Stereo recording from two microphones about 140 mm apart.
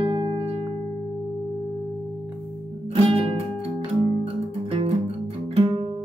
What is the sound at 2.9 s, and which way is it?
Music, 40° right (ahead or behind).